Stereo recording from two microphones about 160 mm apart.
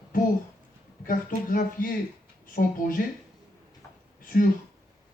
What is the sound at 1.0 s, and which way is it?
Speech, 60° left (ahead or behind).